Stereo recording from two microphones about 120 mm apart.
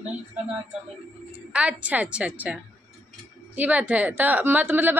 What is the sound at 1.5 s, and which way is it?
A woman's voice, 10° right (ahead or behind).